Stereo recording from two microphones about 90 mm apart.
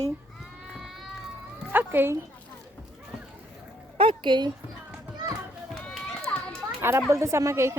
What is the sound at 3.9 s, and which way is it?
Speech, 75° right (ahead or behind).